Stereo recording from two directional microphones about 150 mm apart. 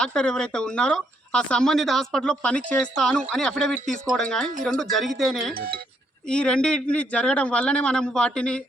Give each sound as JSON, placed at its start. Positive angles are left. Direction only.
{"t": 0.0, "sound": "a man's voice", "side_deg": 5}